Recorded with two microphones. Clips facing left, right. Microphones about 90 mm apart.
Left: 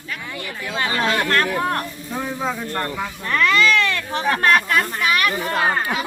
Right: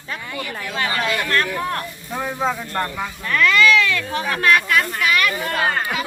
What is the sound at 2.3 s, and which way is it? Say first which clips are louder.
Speech: right 4 dB; 20° right (ahead or behind).